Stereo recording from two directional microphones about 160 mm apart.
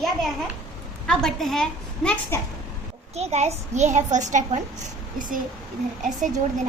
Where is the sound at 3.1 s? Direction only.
45° right (ahead or behind).